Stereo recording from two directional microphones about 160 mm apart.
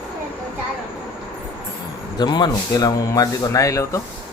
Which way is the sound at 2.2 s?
25° left (ahead or behind).